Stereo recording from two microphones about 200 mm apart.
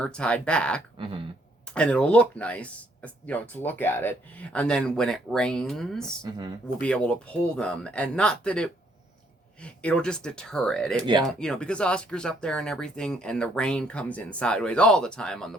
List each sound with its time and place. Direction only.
0.0 s speech: 5° left (ahead or behind)
0.9 s a sound: 25° right (ahead or behind)
1.6 s speech: 5° left (ahead or behind)
11.0 s speech: 25° right (ahead or behind)
11.3 s speech: 5° left (ahead or behind)